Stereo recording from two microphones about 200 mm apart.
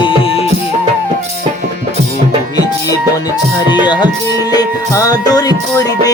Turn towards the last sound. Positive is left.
turn(degrees=20)  # may be behind; listen again after turning